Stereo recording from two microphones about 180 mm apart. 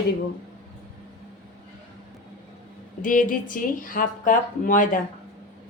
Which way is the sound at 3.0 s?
50° left (ahead or behind).